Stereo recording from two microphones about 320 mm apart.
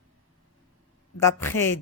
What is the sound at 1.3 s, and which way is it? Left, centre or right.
Speech, centre.